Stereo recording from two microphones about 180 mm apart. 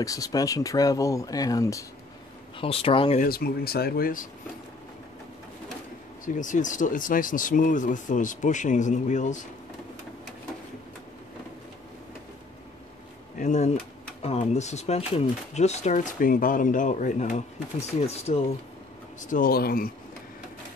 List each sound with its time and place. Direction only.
0.0 s speech: 20° left (ahead or behind)
2.6 s speech: 30° left (ahead or behind)
3.2 s speech: 55° left (ahead or behind)
6.2 s speech: 45° left (ahead or behind)
13.4 s speech: 40° left (ahead or behind)
19.2 s speech: 50° left (ahead or behind)